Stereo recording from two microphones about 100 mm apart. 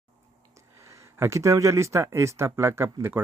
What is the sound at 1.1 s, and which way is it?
Speech, 30° right (ahead or behind).